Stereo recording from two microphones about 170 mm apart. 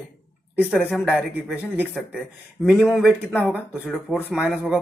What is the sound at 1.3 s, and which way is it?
Speech, 10° right (ahead or behind).